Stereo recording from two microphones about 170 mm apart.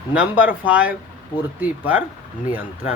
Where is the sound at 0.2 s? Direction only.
10° right (ahead or behind).